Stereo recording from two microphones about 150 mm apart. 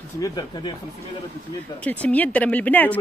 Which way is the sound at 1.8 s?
10° left (ahead or behind).